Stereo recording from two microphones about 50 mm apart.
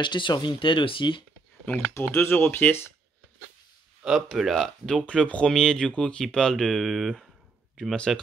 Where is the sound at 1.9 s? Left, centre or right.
Left.